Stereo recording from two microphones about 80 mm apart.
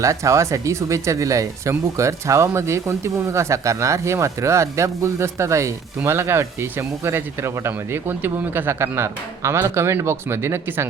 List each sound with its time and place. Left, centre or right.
0.0 s speech: right